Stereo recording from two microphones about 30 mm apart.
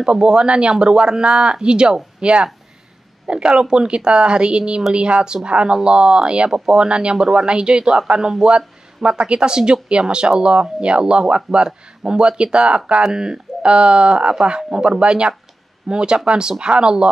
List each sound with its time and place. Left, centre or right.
0.0 s speech: right
13.0 s speech: right
13.6 s speech: right